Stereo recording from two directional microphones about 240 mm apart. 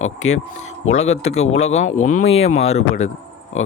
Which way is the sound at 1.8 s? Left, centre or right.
Left.